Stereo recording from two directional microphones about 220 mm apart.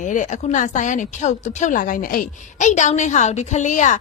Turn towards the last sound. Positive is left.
turn(degrees=35)  # may be behind; listen again after turning